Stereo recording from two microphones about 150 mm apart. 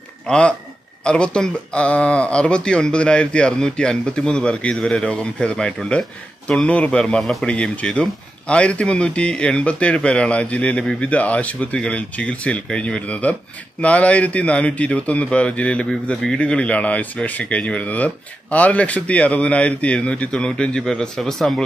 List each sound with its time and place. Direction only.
0.3 s speech: 5° left (ahead or behind)